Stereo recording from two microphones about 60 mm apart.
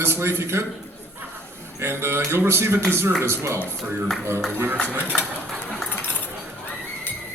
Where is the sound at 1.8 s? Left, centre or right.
Right.